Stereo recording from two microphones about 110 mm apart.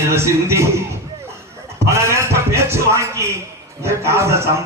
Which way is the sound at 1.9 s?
25° right (ahead or behind).